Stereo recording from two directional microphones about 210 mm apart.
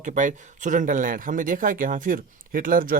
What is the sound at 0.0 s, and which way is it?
Speech, 35° right (ahead or behind).